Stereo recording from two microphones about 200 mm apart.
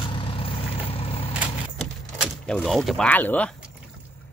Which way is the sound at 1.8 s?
Centre (ahead or behind).